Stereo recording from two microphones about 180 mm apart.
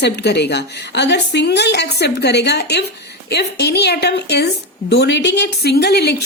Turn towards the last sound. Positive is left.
turn(degrees=65)  # may be behind; listen again after turning